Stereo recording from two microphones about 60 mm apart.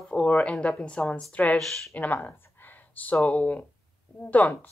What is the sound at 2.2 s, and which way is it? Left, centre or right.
Speech, left.